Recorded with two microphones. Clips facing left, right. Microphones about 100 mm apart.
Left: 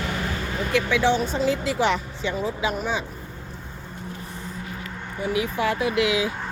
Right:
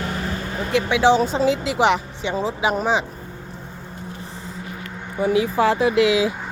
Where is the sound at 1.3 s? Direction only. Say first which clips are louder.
Right 3 dB; 90° right.